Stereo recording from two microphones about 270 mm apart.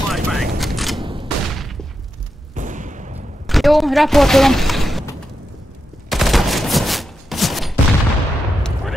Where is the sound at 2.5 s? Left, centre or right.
Right.